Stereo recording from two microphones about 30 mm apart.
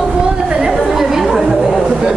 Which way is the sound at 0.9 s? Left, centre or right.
Centre.